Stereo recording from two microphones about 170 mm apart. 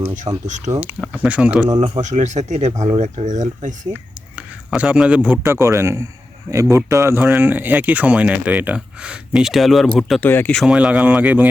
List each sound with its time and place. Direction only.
0.4 s speech: 45° right (ahead or behind)
0.7 s speech: 10° right (ahead or behind)
2.0 s speech: 45° right (ahead or behind)
3.9 s speech: 5° right (ahead or behind)